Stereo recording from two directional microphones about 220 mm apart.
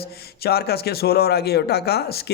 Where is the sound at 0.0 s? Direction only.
45° left (ahead or behind).